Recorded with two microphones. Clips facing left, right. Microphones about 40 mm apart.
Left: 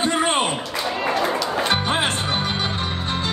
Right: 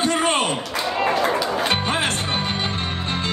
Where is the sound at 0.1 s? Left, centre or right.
Left.